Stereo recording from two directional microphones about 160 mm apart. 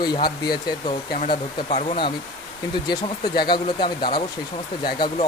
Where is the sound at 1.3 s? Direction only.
40° left (ahead or behind).